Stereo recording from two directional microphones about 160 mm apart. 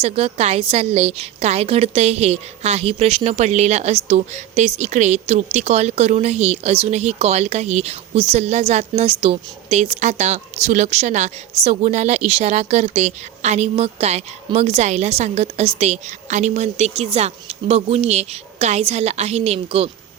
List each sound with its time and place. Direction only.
0.0 s a woman's voice: 40° right (ahead or behind)